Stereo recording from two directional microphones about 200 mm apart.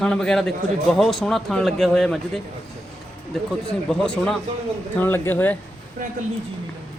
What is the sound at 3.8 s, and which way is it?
Speech, 5° left (ahead or behind).